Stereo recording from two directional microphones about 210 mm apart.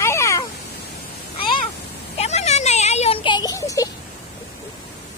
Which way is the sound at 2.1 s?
30° left (ahead or behind).